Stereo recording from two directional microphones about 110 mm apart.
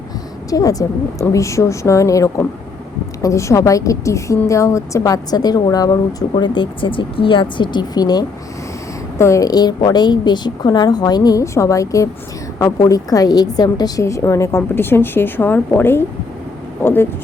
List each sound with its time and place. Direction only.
0.5 s a woman's voice: 35° left (ahead or behind)
9.1 s a woman's voice: 25° left (ahead or behind)